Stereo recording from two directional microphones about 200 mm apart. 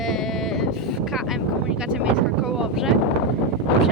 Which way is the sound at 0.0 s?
Centre (ahead or behind).